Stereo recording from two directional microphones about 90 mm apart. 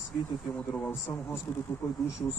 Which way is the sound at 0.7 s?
25° left (ahead or behind).